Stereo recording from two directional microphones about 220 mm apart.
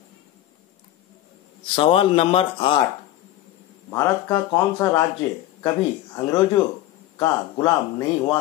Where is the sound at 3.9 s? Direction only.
15° left (ahead or behind).